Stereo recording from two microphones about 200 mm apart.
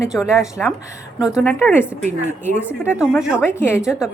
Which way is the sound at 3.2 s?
5° right (ahead or behind).